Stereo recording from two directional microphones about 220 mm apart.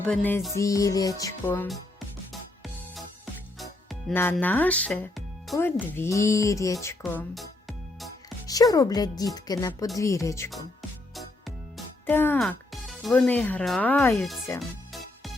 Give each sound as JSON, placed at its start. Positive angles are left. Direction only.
{"t": 0.0, "sound": "speech", "side_deg": 10}
{"t": 4.1, "sound": "speech", "side_deg": 10}
{"t": 6.8, "sound": "music", "side_deg": 10}
{"t": 8.4, "sound": "speech", "side_deg": 15}
{"t": 11.1, "sound": "music", "side_deg": 0}
{"t": 12.0, "sound": "speech", "side_deg": 10}